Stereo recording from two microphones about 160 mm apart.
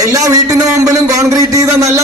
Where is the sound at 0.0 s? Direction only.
20° right (ahead or behind).